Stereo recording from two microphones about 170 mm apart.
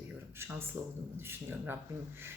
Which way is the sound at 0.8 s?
15° right (ahead or behind).